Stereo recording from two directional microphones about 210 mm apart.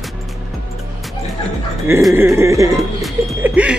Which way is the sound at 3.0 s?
5° right (ahead or behind).